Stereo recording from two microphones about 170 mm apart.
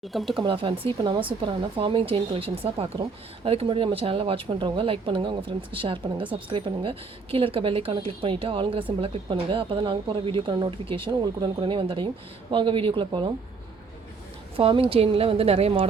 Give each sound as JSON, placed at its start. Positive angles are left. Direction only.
{"t": 0.1, "sound": "speech", "side_deg": 0}
{"t": 0.3, "sound": "speech", "side_deg": -30}
{"t": 14.5, "sound": "speech", "side_deg": -30}